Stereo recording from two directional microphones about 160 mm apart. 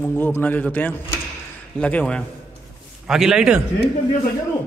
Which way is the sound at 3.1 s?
5° right (ahead or behind).